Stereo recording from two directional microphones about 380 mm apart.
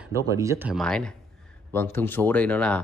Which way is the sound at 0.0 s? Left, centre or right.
Centre.